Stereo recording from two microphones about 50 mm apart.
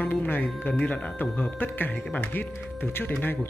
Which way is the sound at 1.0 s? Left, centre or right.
Left.